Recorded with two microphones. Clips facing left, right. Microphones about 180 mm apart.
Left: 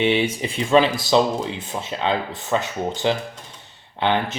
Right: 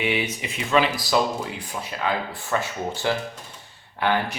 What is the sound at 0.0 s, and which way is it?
Speech, 30° left (ahead or behind).